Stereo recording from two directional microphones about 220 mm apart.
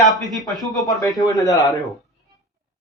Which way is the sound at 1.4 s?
15° left (ahead or behind).